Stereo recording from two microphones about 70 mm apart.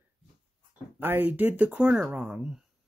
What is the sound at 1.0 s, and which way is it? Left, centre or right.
Speech, right.